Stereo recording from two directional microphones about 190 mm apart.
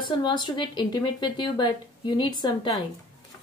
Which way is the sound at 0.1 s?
25° left (ahead or behind).